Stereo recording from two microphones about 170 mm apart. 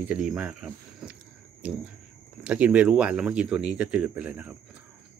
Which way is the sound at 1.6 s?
5° right (ahead or behind).